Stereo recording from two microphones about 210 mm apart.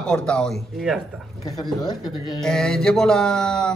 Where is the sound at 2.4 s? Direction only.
Centre (ahead or behind).